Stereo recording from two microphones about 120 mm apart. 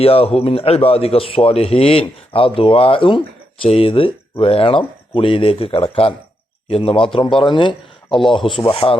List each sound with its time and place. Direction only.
0.0 s speech: 55° left (ahead or behind)